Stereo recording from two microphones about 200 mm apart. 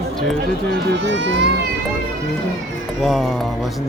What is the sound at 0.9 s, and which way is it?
Speech, 65° right (ahead or behind).